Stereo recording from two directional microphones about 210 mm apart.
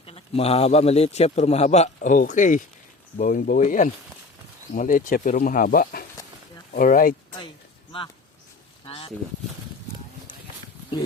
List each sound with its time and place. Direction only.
0.0 s a man's voice: 30° left (ahead or behind)
7.9 s a man's voice: 25° left (ahead or behind)
8.9 s a sound: 25° left (ahead or behind)